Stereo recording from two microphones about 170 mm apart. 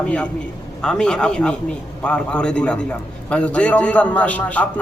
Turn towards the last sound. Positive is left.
turn(degrees=10)  # may be behind; listen again after turning